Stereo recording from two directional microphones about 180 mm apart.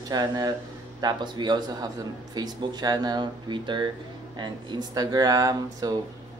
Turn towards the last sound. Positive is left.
turn(degrees=-20)  # may be behind; listen again after turning